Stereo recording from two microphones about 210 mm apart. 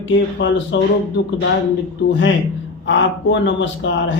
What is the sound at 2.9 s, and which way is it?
A man's voice, 60° left (ahead or behind).